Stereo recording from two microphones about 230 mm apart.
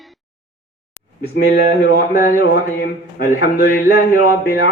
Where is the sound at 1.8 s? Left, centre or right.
Left.